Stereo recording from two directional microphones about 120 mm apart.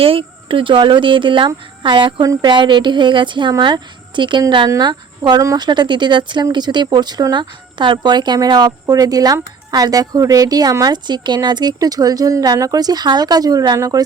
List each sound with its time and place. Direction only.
0.0 s speech: 50° right (ahead or behind); by 14.0 s 30° right (ahead or behind)